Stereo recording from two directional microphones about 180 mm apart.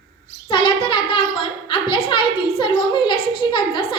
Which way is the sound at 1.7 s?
30° left (ahead or behind).